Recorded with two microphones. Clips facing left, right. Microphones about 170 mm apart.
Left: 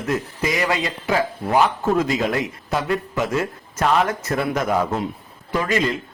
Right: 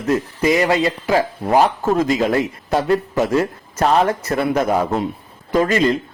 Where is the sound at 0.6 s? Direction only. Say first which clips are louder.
Right 6 dB; 35° right (ahead or behind).